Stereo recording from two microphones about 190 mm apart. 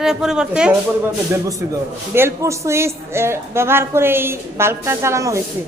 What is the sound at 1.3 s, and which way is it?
A woman's voice, 15° right (ahead or behind).